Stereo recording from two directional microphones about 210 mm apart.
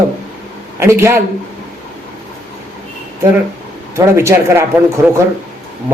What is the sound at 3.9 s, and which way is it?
Speech, 10° right (ahead or behind).